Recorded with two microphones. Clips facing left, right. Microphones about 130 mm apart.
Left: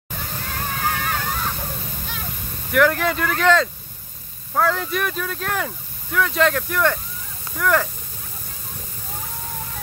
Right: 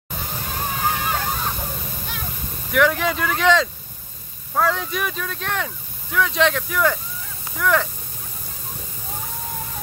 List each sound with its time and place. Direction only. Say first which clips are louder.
0.1 s water: right 1 dB; 15° right (ahead or behind)
2.7 s speech: left 1 dB; centre (ahead or behind)